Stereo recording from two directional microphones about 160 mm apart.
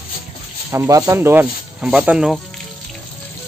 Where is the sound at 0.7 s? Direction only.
20° right (ahead or behind); by 2.4 s 5° right (ahead or behind).